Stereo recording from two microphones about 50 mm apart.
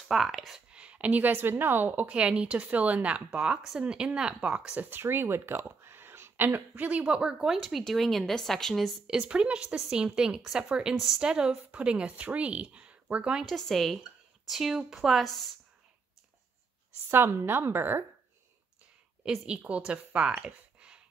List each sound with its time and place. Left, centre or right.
0.1 s a woman's voice: centre
0.7 s speech: right
2.0 s speech: right
3.9 s speech: centre
4.8 s speech: right
7.4 s a woman's voice: centre
9.0 s speech: centre
13.5 s a woman's voice: centre
17.1 s a woman's voice: right
19.2 s speech: centre